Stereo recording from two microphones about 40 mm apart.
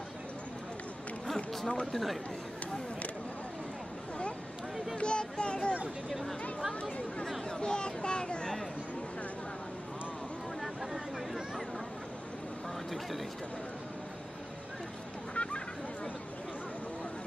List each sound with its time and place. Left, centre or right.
1.3 s run: centre
1.9 s a man's voice: centre
4.9 s speech: left
7.6 s speech: left
10.6 s a sound: centre
15.3 s a sound: left